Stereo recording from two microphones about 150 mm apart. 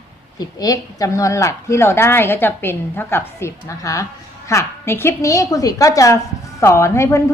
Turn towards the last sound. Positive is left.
turn(degrees=20)  # may be behind; listen again after turning